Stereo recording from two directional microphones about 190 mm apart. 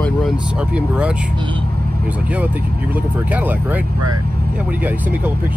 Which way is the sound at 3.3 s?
10° right (ahead or behind).